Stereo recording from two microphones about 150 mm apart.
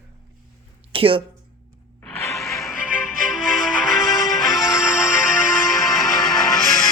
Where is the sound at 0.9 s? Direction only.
35° right (ahead or behind).